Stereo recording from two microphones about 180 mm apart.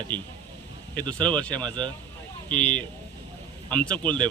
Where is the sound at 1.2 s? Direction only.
5° left (ahead or behind).